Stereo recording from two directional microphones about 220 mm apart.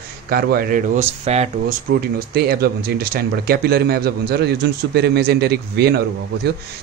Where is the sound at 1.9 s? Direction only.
45° right (ahead or behind).